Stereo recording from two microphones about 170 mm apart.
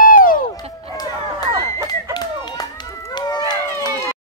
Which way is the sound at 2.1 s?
25° left (ahead or behind).